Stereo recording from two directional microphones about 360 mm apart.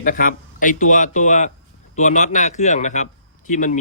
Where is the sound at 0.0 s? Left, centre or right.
Left.